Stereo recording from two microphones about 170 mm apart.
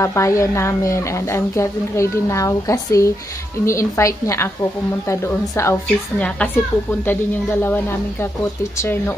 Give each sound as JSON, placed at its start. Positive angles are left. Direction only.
{"t": 0.0, "sound": "a woman's voice", "side_deg": 15}